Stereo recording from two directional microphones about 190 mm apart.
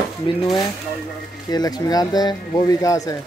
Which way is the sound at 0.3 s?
25° left (ahead or behind).